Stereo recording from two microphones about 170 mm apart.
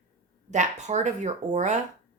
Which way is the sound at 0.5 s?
45° right (ahead or behind).